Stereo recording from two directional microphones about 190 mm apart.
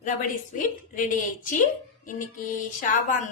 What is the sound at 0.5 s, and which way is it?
A woman's voice, 45° left (ahead or behind).